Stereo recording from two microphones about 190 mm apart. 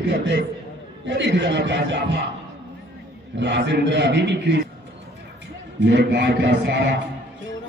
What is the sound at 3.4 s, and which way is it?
A man's voice, 70° right (ahead or behind).